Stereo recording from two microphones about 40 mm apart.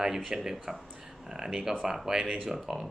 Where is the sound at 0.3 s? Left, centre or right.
Centre.